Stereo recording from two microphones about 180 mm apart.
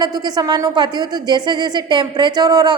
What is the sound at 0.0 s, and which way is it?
A woman's voice, 20° right (ahead or behind).